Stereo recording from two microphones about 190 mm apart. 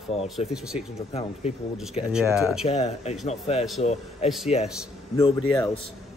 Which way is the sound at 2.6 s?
35° left (ahead or behind).